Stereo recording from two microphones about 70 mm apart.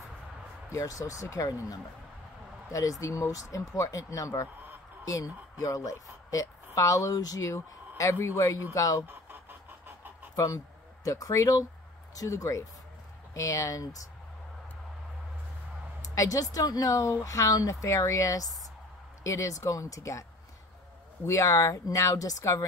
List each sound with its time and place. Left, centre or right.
0.7 s a woman's voice: left
9.0 s a sound: right
10.3 s a woman's voice: left
16.0 s a woman's voice: left
21.3 s speech: left